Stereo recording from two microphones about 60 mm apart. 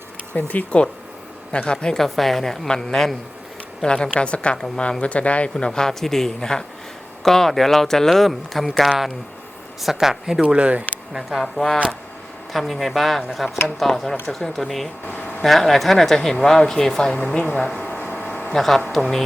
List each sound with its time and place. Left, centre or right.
0.3 s a man's voice: left; by 10.4 s centre
10.4 s speech: right
11.1 s speech: centre
17.3 s speech: centre
17.7 s a sound: left
18.5 s speech: centre